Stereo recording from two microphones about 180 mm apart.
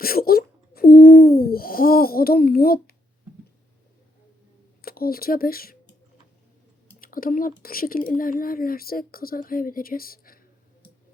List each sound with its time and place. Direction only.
0.0 s a sound: 55° left (ahead or behind)
4.8 s speech: 55° left (ahead or behind)
7.0 s speech: 50° left (ahead or behind)